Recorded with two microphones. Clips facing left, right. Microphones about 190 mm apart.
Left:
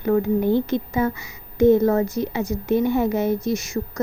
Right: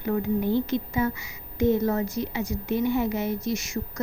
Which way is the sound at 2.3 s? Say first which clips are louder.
Left 6 dB; 45° left (ahead or behind).